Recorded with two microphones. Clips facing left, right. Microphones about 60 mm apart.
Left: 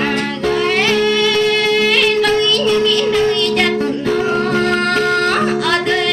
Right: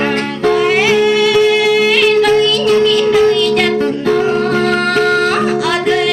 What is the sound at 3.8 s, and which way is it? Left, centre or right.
Music, right.